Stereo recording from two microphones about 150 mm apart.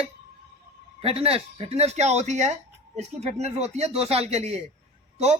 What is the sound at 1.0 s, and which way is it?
Speech, 40° right (ahead or behind).